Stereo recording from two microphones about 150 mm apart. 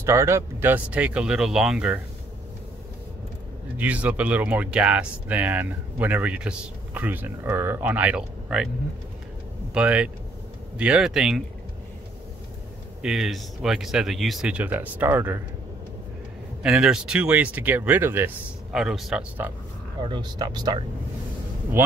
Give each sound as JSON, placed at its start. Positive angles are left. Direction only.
{"t": 0.0, "sound": "speech", "side_deg": -20}
{"t": 3.7, "sound": "speech", "side_deg": -10}
{"t": 9.8, "sound": "speech", "side_deg": -10}
{"t": 13.0, "sound": "speech", "side_deg": -5}
{"t": 16.6, "sound": "speech", "side_deg": -5}
{"t": 18.8, "sound": "speech", "side_deg": -5}
{"t": 20.0, "sound": "speech", "side_deg": -30}
{"t": 21.8, "sound": "speech", "side_deg": -15}